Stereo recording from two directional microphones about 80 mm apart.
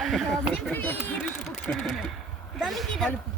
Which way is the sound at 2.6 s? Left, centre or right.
Centre.